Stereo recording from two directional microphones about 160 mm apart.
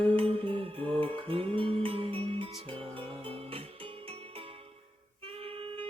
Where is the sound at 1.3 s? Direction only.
35° right (ahead or behind).